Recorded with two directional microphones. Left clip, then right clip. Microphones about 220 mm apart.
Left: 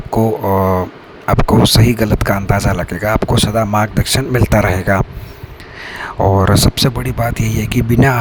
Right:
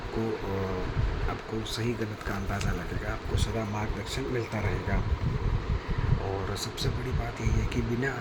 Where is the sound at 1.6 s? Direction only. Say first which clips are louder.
Left 19 dB; 50° left (ahead or behind).